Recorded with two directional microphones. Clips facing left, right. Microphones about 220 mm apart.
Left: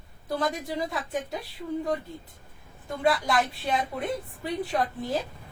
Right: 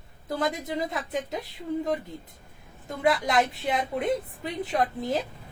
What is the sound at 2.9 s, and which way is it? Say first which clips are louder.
A woman's voice: even; 20° right (ahead or behind).